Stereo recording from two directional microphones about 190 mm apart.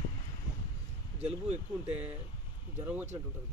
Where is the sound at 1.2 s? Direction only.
35° right (ahead or behind).